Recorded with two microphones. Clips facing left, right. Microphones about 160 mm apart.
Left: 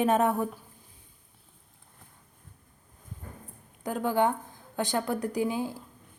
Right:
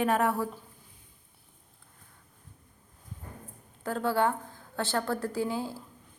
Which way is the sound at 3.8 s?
15° left (ahead or behind).